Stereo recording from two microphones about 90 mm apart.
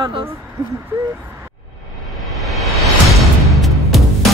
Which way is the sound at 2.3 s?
Centre (ahead or behind).